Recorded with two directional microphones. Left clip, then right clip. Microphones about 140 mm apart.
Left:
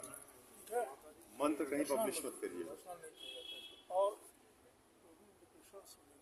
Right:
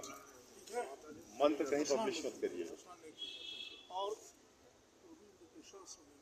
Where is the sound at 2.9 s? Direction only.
45° left (ahead or behind).